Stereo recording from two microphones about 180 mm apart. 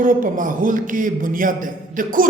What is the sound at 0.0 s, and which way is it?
A man's voice, 45° right (ahead or behind).